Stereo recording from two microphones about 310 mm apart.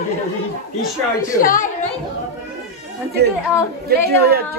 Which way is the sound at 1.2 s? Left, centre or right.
Left.